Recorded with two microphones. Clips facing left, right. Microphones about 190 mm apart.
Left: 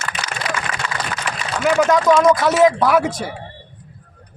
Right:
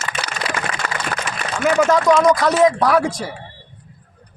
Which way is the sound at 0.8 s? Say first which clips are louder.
Right 1 dB; 55° right (ahead or behind).